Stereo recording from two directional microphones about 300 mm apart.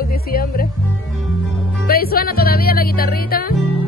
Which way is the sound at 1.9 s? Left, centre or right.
Left.